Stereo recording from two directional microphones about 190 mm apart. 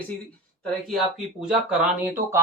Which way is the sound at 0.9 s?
Centre (ahead or behind).